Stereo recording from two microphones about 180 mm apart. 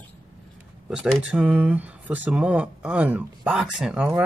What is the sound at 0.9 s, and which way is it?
Speech, 5° right (ahead or behind).